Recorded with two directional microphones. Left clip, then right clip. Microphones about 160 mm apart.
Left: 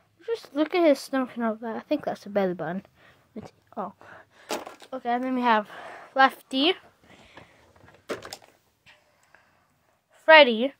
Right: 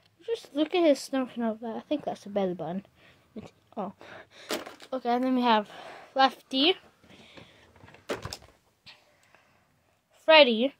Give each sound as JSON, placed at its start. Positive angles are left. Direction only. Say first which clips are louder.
{"t": 0.2, "sound": "speech", "louder": "left 2 dB", "side_deg": 5}
{"t": 2.8, "sound": "a sound", "louder": "left 2 dB", "side_deg": 0}
{"t": 4.0, "sound": "speech", "louder": "right 1 dB", "side_deg": -50}
{"t": 4.9, "sound": "speech", "louder": "even", "side_deg": -15}
{"t": 5.4, "sound": "speech", "louder": "left 2 dB", "side_deg": 0}
{"t": 8.1, "sound": "door", "louder": "even", "side_deg": 0}
{"t": 10.1, "sound": "a woman's voice", "louder": "left 3 dB", "side_deg": 5}